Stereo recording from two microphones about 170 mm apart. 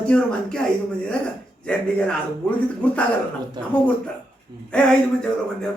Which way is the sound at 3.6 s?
25° right (ahead or behind).